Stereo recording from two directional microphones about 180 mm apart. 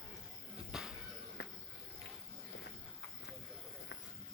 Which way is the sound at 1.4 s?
65° left (ahead or behind).